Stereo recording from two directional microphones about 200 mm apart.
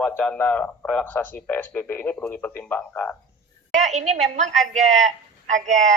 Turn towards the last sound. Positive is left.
turn(degrees=-35)  # may be behind; listen again after turning